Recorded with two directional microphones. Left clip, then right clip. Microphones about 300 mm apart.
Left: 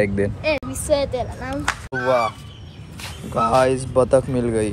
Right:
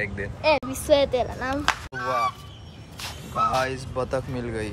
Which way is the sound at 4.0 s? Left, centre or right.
Centre.